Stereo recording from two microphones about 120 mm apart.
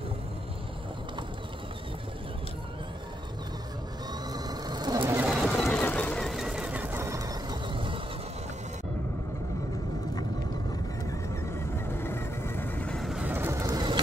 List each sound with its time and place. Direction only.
4.1 s vehicle: 35° right (ahead or behind)
5.3 s run: centre (ahead or behind)
5.8 s a sound: 15° left (ahead or behind); by 8.0 s 45° right (ahead or behind)
11.1 s vehicle: 20° left (ahead or behind); by 13.2 s 5° left (ahead or behind)
13.2 s vehicle: 15° right (ahead or behind)